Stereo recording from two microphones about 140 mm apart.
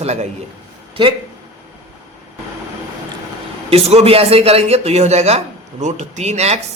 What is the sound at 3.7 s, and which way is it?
A man's voice, 45° right (ahead or behind).